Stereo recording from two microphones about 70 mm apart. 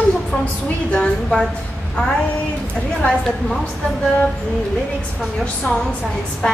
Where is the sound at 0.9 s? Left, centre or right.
Centre.